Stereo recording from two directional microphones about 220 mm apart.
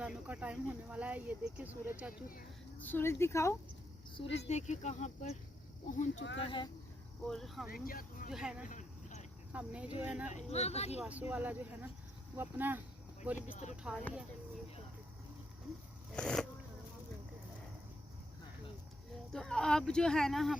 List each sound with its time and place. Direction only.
0.0 s speech: 5° right (ahead or behind)
2.8 s speech: 10° left (ahead or behind)
4.1 s speech: 25° left (ahead or behind)
6.4 s speech: 20° left (ahead or behind)
7.3 s speech: centre (ahead or behind)
7.7 s speech: 40° left (ahead or behind)
8.3 s speech: 5° right (ahead or behind)
8.6 s a sound: 35° left (ahead or behind)
9.5 s speech: 5° right (ahead or behind)
10.2 s speech: 30° left (ahead or behind)
11.0 s speech: 5° right (ahead or behind)
16.1 s speech: 5° left (ahead or behind)
19.3 s speech: centre (ahead or behind)